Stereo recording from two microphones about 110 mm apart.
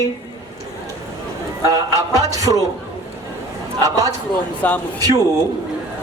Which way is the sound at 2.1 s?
30° right (ahead or behind).